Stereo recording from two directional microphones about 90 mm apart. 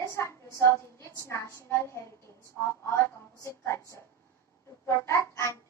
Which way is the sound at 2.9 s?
30° left (ahead or behind).